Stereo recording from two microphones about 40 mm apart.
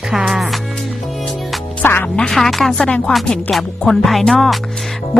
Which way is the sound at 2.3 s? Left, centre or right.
Centre.